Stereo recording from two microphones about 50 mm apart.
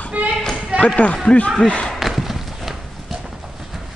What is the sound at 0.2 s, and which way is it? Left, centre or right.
Basketball bounce, right.